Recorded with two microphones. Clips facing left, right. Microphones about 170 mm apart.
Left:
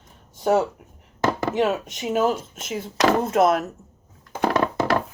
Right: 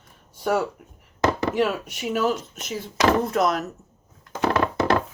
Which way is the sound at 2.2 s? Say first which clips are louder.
Left 1 dB; 50° left (ahead or behind).